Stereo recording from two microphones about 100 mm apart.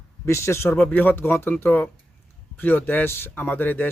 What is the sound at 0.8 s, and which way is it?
A man's voice, 15° left (ahead or behind).